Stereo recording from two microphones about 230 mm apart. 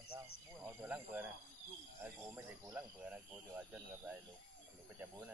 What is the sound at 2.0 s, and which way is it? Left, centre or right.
Speech, centre.